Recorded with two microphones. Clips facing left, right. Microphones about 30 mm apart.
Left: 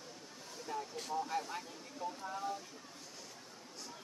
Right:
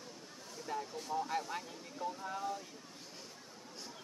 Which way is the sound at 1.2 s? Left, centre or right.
Centre.